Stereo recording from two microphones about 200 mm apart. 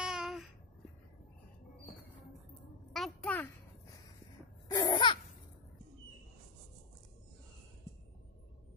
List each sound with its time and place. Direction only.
0.0 s babbling: 5° right (ahead or behind)
2.9 s a sound: centre (ahead or behind)
4.6 s laughter: 20° left (ahead or behind)